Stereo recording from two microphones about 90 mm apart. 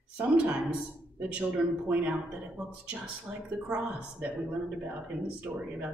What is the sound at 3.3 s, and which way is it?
Speech, 5° right (ahead or behind).